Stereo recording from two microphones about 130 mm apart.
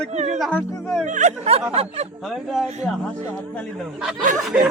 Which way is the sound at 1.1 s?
55° right (ahead or behind).